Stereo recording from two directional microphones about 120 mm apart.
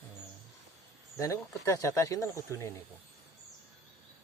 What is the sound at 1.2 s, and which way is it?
Speech, 25° left (ahead or behind).